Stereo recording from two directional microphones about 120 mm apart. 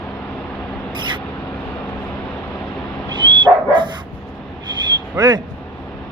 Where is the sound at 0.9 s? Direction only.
40° right (ahead or behind).